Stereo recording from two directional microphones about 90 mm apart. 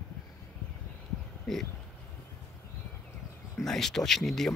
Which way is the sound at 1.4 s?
5° left (ahead or behind).